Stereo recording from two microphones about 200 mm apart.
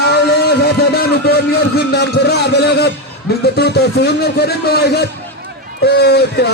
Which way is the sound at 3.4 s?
55° left (ahead or behind).